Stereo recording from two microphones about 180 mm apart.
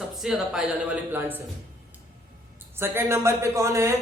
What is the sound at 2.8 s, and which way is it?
Speech, 15° right (ahead or behind).